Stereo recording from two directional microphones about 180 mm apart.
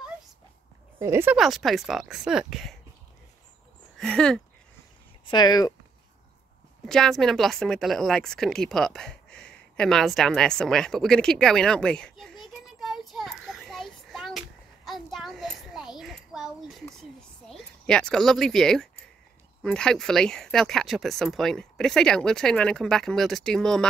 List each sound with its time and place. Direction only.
0.9 s speech: 15° right (ahead or behind)
1.3 s speech: centre (ahead or behind)
4.0 s speech: 5° left (ahead or behind)
5.2 s speech: 25° left (ahead or behind)
6.9 s speech: centre (ahead or behind)
14.9 s a sound: centre (ahead or behind)
19.6 s speech: 5° left (ahead or behind)